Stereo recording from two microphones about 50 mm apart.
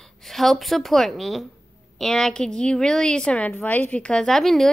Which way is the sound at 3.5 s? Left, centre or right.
Left.